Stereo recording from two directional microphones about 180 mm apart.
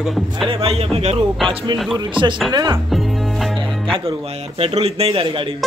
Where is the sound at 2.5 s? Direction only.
25° right (ahead or behind).